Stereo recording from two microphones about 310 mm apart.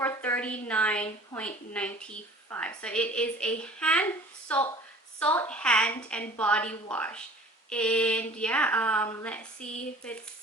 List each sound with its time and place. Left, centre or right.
0.0 s a woman's voice: centre
9.6 s speech: left